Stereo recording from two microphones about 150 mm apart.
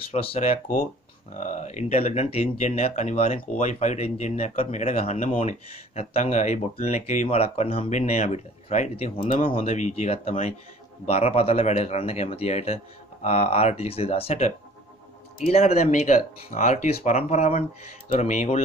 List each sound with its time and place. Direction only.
0.1 s speech: 45° left (ahead or behind)